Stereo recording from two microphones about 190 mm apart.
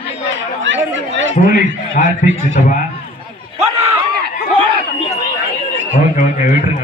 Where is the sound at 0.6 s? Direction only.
80° right.